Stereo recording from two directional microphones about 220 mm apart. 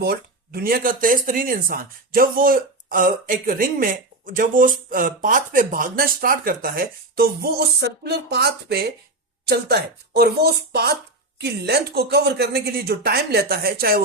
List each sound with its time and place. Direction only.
0.0 s speech: 45° right (ahead or behind)